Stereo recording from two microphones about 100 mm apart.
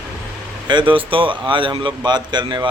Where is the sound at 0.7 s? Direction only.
55° right (ahead or behind).